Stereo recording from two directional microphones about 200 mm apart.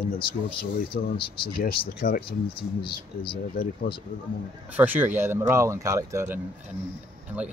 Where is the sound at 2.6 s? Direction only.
25° left (ahead or behind).